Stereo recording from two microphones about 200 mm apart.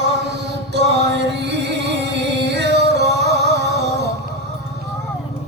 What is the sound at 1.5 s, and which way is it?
Music, 55° right (ahead or behind).